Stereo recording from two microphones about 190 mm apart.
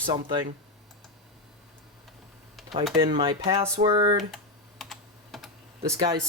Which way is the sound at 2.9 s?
25° right (ahead or behind).